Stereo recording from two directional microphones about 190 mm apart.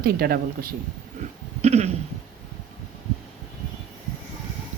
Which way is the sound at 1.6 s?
35° right (ahead or behind).